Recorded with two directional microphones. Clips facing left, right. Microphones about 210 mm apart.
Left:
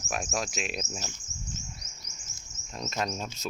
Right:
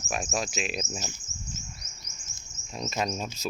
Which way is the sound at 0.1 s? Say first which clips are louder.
Right 1 dB; centre (ahead or behind).